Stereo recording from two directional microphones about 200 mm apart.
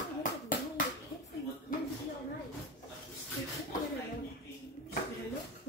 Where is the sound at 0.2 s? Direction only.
40° left (ahead or behind).